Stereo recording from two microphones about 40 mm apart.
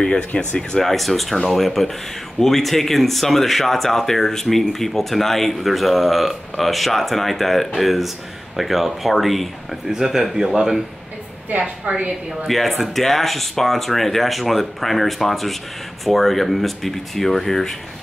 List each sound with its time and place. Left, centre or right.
0.0 s speech: left
0.3 s speech: left
0.7 s speech: centre
9.8 s speech: centre
11.5 s a woman's voice: right
12.4 s speech: centre